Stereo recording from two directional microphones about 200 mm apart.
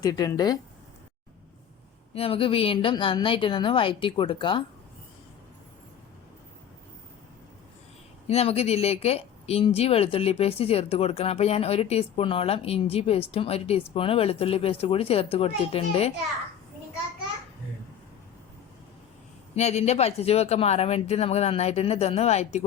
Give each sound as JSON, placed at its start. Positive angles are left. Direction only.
{"t": 0.0, "sound": "a woman's voice", "side_deg": 20}
{"t": 2.1, "sound": "a woman's voice", "side_deg": 25}
{"t": 8.3, "sound": "a woman's voice", "side_deg": 30}
{"t": 19.5, "sound": "a woman's voice", "side_deg": 35}